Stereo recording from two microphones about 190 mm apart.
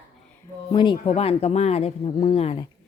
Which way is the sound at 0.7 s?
25° left (ahead or behind).